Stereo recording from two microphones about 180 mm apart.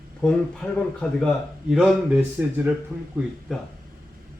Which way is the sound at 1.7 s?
5° right (ahead or behind).